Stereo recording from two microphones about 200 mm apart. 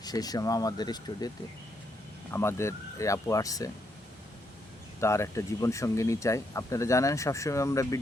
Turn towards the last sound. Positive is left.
turn(degrees=15)  # may be behind; listen again after turning